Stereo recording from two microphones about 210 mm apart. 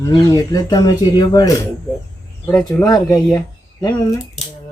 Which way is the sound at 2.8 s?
20° left (ahead or behind).